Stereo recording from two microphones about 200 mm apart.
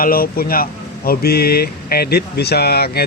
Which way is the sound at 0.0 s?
45° left (ahead or behind).